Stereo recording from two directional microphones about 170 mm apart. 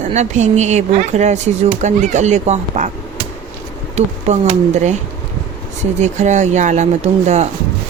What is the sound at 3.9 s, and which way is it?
Speech, 40° right (ahead or behind).